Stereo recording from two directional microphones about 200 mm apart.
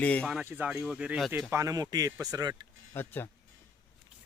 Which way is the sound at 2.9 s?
10° left (ahead or behind).